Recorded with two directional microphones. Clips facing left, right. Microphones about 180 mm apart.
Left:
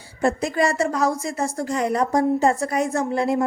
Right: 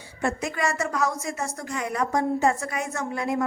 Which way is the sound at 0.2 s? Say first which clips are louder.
Left 6 dB; 35° left (ahead or behind).